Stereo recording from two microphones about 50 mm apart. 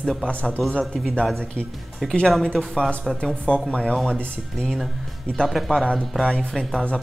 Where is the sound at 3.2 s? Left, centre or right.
Centre.